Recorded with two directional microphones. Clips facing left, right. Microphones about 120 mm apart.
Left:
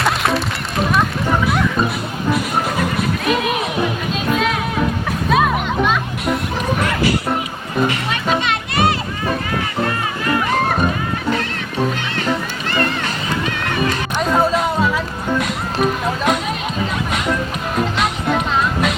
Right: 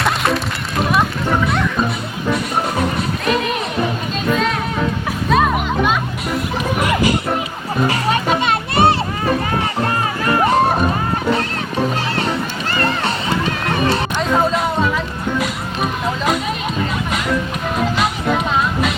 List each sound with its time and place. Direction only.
0.0 s run: centre (ahead or behind)
3.2 s music: 5° left (ahead or behind)
5.3 s music: centre (ahead or behind)
7.9 s music: 40° right (ahead or behind)
10.2 s music: 35° right (ahead or behind)
12.7 s run: 35° right (ahead or behind)
13.7 s music: 35° right (ahead or behind)
14.2 s music: centre (ahead or behind)
17.9 s music: centre (ahead or behind)